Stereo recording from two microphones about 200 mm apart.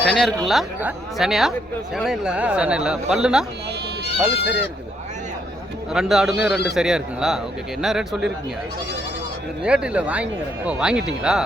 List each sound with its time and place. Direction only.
0.0 s speech: 5° left (ahead or behind)
5.9 s speech: centre (ahead or behind)
6.4 s a man's voice: 55° left (ahead or behind)
6.7 s speech: 5° right (ahead or behind)
9.6 s speech: 5° right (ahead or behind)